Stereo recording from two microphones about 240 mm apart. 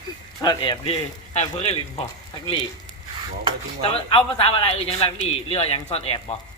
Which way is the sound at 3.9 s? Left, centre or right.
Left.